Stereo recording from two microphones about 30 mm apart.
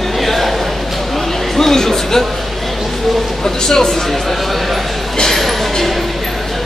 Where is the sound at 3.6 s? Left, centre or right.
Centre.